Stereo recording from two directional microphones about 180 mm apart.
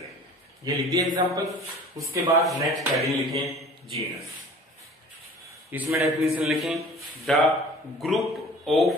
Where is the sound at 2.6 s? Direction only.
Centre (ahead or behind).